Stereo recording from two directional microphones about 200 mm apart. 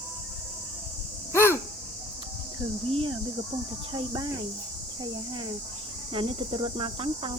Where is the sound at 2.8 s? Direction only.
30° right (ahead or behind).